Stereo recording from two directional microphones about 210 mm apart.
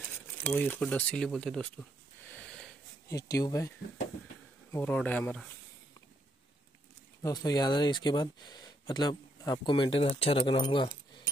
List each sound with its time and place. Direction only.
0.5 s speech: 5° left (ahead or behind)
3.1 s speech: 15° left (ahead or behind)
4.7 s speech: 5° left (ahead or behind)
7.2 s speech: 20° left (ahead or behind)